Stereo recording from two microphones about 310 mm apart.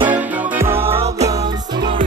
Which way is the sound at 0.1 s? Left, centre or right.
Centre.